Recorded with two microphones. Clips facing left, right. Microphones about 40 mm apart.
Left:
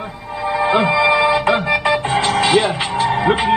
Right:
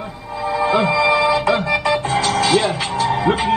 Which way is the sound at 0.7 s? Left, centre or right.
Left.